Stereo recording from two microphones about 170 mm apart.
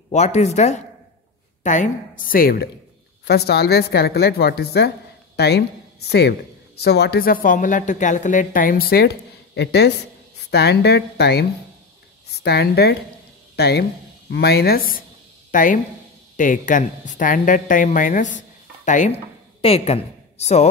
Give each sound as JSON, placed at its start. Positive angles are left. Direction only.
{"t": 0.1, "sound": "speech", "side_deg": 40}
{"t": 3.3, "sound": "a woman's voice", "side_deg": 70}